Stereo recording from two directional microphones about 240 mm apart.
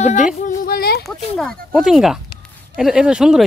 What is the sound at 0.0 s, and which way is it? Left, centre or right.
Speech, left.